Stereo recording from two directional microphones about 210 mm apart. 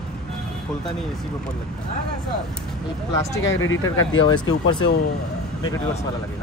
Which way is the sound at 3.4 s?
65° left (ahead or behind).